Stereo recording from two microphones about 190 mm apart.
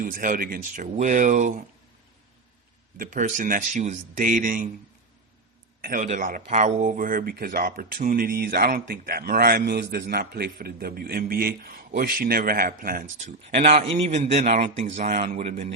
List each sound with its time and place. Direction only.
0.0 s speech: 45° right (ahead or behind)
3.0 s speech: 45° right (ahead or behind)
5.8 s speech: 45° right (ahead or behind)
13.9 s a man's voice: 35° right (ahead or behind)